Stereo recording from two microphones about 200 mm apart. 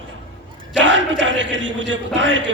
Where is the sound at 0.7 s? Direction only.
65° right (ahead or behind).